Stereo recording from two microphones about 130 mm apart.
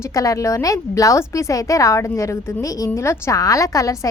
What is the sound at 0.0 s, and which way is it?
A woman's voice, 25° left (ahead or behind).